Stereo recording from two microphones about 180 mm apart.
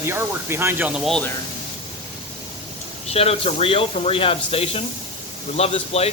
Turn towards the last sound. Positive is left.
turn(degrees=35)  # may be behind; listen again after turning